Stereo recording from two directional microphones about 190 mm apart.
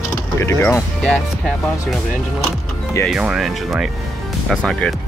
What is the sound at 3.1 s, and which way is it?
Speech, 5° right (ahead or behind).